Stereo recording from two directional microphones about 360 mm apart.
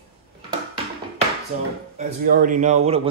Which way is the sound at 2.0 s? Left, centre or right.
Right.